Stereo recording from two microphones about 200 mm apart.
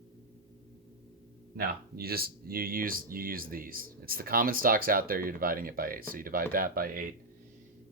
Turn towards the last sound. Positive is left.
turn(degrees=-45)  # may be behind; listen again after turning